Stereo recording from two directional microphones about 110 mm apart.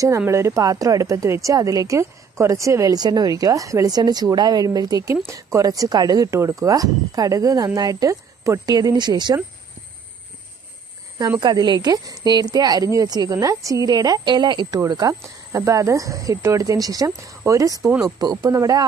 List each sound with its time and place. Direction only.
0.3 s speech: 25° right (ahead or behind); by 9.4 s 40° right (ahead or behind)
11.1 s speech: 40° right (ahead or behind)
14.8 s speech: 35° right (ahead or behind)